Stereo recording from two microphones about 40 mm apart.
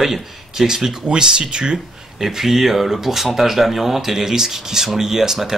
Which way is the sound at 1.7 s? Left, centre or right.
Centre.